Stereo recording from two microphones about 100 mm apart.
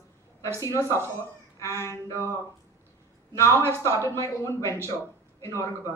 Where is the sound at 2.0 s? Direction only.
30° left (ahead or behind).